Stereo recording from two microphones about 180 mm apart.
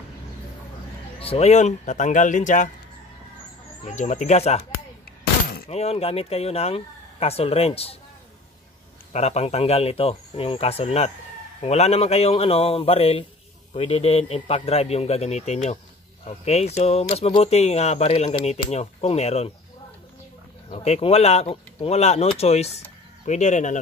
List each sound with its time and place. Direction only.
1.2 s speech: 35° left (ahead or behind)
3.8 s speech: 40° left (ahead or behind)
5.2 s a sound: 60° left (ahead or behind)
5.7 s speech: 35° left (ahead or behind)
9.1 s speech: 35° left (ahead or behind)
20.7 s speech: 35° left (ahead or behind)